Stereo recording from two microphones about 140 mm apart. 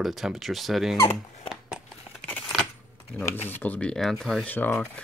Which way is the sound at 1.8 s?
5° left (ahead or behind).